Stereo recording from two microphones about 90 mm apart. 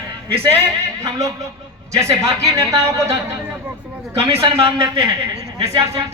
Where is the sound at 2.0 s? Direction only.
35° right (ahead or behind).